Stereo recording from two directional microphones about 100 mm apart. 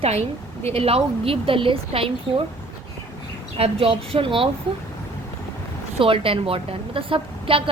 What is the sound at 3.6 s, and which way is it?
Speech, 75° right (ahead or behind).